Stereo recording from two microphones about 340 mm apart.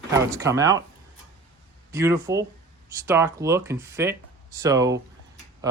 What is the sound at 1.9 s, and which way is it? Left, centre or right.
Speech, centre.